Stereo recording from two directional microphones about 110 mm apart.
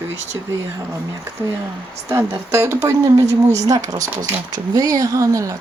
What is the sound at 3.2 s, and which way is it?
Speech, 90° right.